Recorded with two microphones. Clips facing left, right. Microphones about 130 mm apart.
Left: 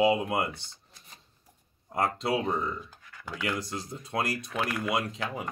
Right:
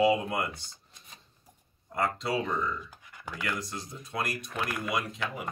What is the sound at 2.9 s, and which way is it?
Computer keyboard, 15° right (ahead or behind).